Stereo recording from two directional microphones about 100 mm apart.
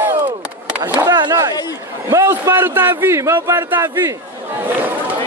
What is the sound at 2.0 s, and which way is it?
A man's voice, 30° right (ahead or behind).